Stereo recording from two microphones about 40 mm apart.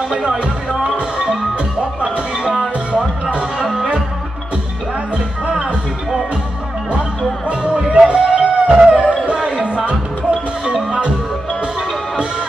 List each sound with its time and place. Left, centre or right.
0.7 s music: right
7.4 s music: right